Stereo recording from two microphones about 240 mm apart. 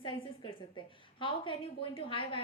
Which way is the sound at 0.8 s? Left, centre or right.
Centre.